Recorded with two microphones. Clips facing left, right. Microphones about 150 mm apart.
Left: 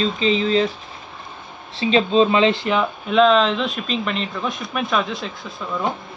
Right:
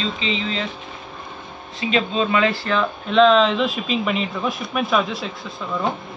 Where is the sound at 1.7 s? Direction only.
30° left (ahead or behind).